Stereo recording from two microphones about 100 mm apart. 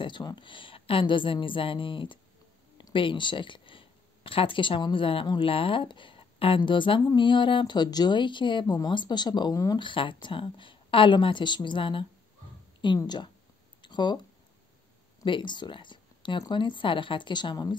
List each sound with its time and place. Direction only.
0.0 s speech: 45° left (ahead or behind)
0.5 s a woman's voice: 60° left (ahead or behind); by 9.8 s 40° left (ahead or behind)
9.8 s a woman's voice: 55° left (ahead or behind)
12.8 s speech: 45° left (ahead or behind)
13.7 s a sound: 50° left (ahead or behind)
15.2 s speech: 55° left (ahead or behind)